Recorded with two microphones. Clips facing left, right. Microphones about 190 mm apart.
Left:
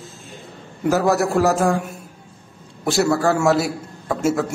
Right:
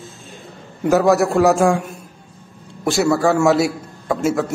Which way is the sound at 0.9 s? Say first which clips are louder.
Right 3 dB; centre (ahead or behind).